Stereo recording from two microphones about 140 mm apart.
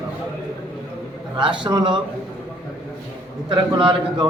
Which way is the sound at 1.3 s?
35° right (ahead or behind).